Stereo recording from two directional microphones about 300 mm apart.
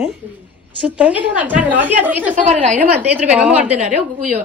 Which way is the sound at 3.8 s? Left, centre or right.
Right.